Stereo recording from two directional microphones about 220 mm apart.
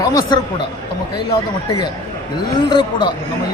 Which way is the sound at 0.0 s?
15° left (ahead or behind).